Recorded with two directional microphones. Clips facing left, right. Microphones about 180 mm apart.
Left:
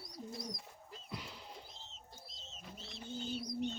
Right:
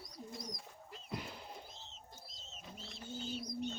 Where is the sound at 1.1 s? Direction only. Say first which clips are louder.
Right 4 dB; 55° right (ahead or behind).